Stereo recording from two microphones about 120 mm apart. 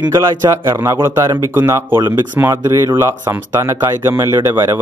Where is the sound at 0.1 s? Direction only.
25° right (ahead or behind).